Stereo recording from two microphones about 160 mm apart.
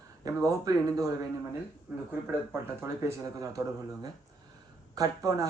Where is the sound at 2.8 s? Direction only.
15° right (ahead or behind).